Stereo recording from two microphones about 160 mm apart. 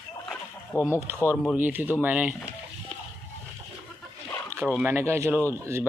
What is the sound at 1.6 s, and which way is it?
Speech, 10° right (ahead or behind).